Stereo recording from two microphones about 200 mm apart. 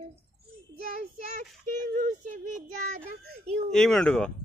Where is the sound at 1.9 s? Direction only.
40° right (ahead or behind).